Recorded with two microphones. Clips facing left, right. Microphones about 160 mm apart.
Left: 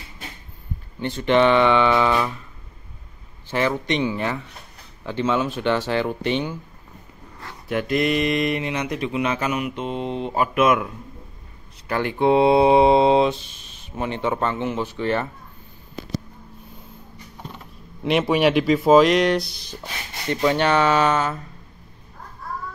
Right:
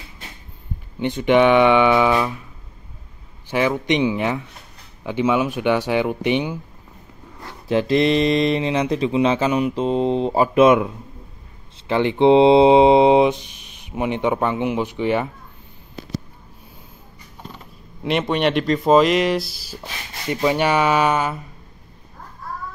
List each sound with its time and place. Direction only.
0.9 s speech: 15° right (ahead or behind)
3.4 s speech: 10° right (ahead or behind)
7.6 s speech: 30° right (ahead or behind)
11.9 s speech: 20° right (ahead or behind)
18.0 s speech: 5° left (ahead or behind)